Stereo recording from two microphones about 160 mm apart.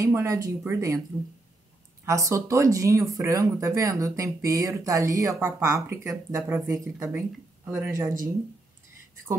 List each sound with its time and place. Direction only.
0.0 s speech: 20° right (ahead or behind)
2.0 s speech: 20° right (ahead or behind)